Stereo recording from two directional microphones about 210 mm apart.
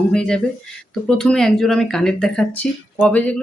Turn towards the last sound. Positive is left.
turn(degrees=5)  # may be behind; listen again after turning